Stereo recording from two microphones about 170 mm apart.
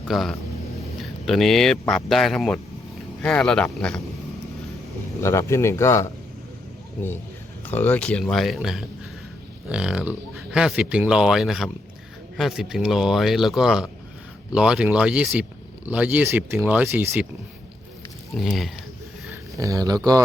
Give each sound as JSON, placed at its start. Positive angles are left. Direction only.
{"t": 0.1, "sound": "speech", "side_deg": 0}
{"t": 5.2, "sound": "speech", "side_deg": 15}
{"t": 7.7, "sound": "speech", "side_deg": 10}
{"t": 18.3, "sound": "speech", "side_deg": 0}
{"t": 19.3, "sound": "a sound", "side_deg": -20}